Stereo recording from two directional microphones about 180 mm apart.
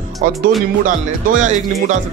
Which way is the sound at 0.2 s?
45° right (ahead or behind).